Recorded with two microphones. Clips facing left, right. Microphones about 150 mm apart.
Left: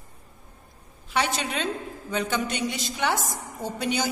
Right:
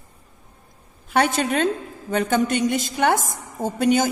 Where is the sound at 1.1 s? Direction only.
50° right (ahead or behind).